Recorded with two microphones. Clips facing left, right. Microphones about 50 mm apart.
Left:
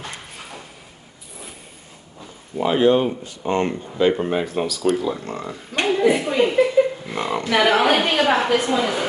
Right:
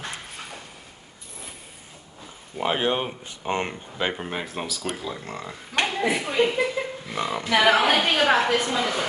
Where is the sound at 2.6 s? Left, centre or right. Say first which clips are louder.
Left 8 dB; right.